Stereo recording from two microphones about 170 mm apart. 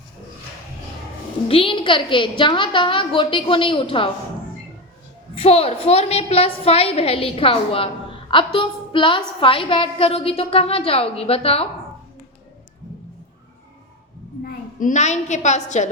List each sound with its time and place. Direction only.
1.5 s a woman's voice: 30° left (ahead or behind)
5.3 s a woman's voice: 35° left (ahead or behind)
14.4 s a woman's voice: 50° left (ahead or behind)